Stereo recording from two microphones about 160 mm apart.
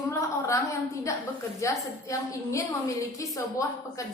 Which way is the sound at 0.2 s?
20° left (ahead or behind).